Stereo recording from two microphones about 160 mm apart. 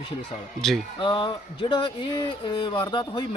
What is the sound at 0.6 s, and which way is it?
Speech, 5° left (ahead or behind).